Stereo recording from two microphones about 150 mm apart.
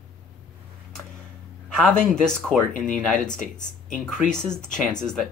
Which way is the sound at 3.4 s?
60° left (ahead or behind).